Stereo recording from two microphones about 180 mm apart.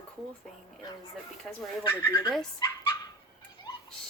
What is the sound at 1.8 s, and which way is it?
Speech, 25° left (ahead or behind).